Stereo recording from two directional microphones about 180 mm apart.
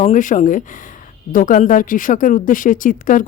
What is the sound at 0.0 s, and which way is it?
Speech, 40° left (ahead or behind).